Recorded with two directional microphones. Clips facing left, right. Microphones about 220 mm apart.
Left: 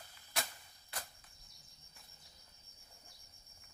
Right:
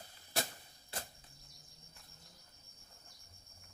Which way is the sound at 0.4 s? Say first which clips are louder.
Right 4 dB; 30° right (ahead or behind).